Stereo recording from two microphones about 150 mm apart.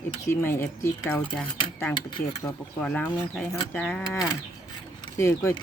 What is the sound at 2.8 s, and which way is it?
Speech, 10° left (ahead or behind).